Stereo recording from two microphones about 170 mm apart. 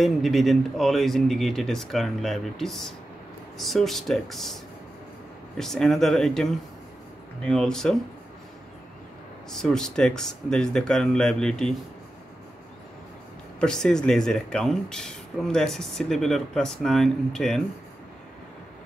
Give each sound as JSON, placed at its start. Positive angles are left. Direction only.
{"t": 0.0, "sound": "speech", "side_deg": 0}
{"t": 5.6, "sound": "speech", "side_deg": 0}
{"t": 9.5, "sound": "speech", "side_deg": 5}
{"t": 13.6, "sound": "speech", "side_deg": 5}